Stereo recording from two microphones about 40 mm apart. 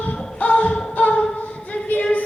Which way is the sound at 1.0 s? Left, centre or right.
Left.